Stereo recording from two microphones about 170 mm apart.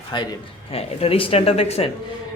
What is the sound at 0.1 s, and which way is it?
Speech, 25° left (ahead or behind).